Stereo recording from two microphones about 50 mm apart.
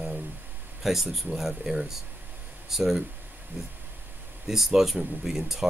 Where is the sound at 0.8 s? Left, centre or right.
Centre.